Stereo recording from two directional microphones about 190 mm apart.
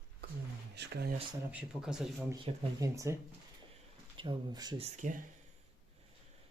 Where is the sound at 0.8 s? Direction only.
60° right (ahead or behind).